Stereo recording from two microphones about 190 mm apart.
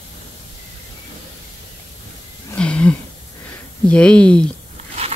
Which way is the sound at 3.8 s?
5° left (ahead or behind).